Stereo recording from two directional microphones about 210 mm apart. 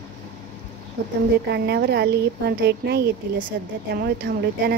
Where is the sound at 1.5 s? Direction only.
50° right (ahead or behind).